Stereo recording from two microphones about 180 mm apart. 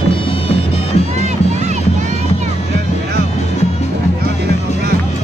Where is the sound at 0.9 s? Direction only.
35° left (ahead or behind).